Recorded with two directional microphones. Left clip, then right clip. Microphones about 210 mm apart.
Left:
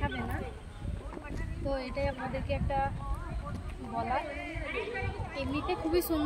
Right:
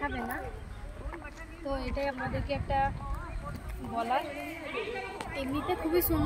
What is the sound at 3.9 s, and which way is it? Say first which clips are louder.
Speech: right 2 dB; 5° left (ahead or behind).